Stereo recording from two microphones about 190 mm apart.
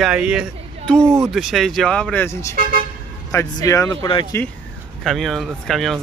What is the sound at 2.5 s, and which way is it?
Speech, 50° right (ahead or behind).